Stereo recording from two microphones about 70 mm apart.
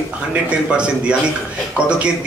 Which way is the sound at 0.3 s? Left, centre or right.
Centre.